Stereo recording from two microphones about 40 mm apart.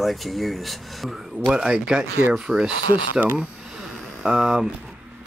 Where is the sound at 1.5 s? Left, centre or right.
Centre.